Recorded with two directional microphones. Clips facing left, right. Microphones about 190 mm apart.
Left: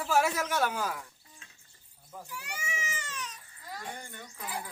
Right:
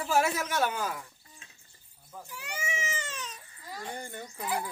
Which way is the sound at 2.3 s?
20° right (ahead or behind).